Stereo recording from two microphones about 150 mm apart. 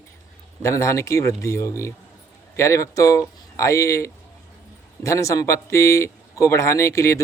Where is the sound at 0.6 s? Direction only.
20° left (ahead or behind).